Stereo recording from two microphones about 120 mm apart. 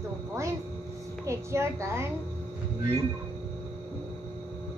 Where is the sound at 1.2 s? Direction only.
25° right (ahead or behind).